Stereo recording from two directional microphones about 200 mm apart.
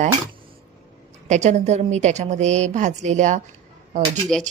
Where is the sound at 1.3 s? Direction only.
35° right (ahead or behind).